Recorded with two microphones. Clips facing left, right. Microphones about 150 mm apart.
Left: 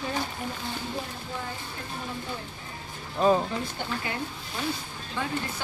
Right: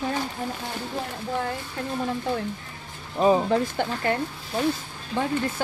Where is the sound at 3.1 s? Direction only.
15° right (ahead or behind).